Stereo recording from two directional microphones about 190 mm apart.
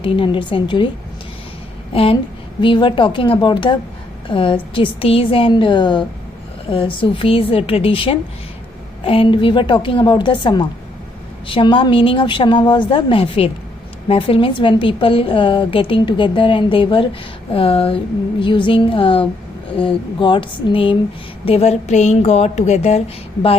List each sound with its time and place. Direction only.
0.0 s a woman's voice: 25° left (ahead or behind)
1.9 s a woman's voice: 30° left (ahead or behind)